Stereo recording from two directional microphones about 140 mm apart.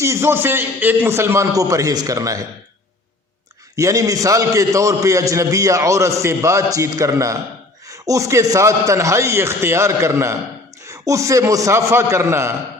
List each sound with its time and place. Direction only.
0.0 s a man's voice: 20° right (ahead or behind)
3.8 s a man's voice: 20° right (ahead or behind)